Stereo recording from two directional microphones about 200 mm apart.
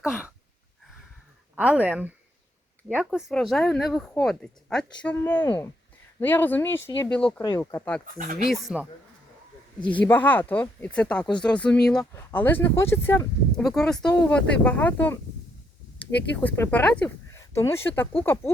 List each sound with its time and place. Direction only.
0.0 s a sound: 5° right (ahead or behind)
1.5 s a woman's voice: 5° right (ahead or behind)
7.4 s speech: 15° left (ahead or behind)
8.0 s speech: 45° right (ahead or behind)
8.4 s a woman's voice: centre (ahead or behind)
9.8 s a woman's voice: 5° left (ahead or behind)
16.3 s speech: 10° left (ahead or behind)